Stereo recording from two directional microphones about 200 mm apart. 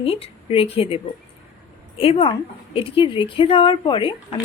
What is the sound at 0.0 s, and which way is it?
Speech, 30° left (ahead or behind).